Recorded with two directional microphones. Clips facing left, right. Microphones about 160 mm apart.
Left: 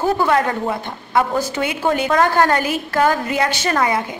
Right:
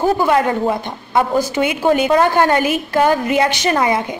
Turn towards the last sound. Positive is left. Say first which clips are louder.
# right 2 dB
turn(degrees=-20)  # may be behind; listen again after turning